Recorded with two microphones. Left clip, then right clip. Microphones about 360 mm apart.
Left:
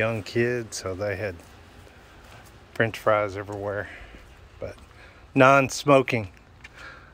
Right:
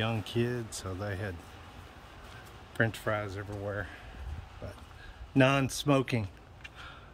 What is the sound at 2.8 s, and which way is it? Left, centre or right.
Speech, centre.